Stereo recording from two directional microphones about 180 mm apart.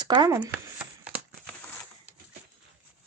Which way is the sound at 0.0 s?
25° right (ahead or behind).